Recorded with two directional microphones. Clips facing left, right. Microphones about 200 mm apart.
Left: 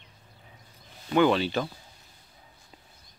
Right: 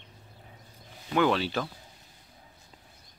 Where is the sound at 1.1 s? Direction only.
Centre (ahead or behind).